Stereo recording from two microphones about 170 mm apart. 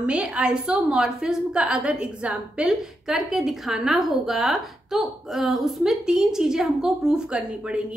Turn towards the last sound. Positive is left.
turn(degrees=-5)  # may be behind; listen again after turning